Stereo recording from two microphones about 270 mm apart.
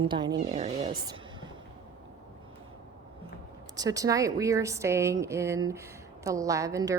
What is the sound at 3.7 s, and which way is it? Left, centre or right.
A woman's voice, centre.